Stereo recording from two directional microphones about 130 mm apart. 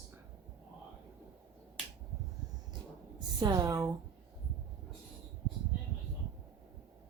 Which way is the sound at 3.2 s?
30° right (ahead or behind).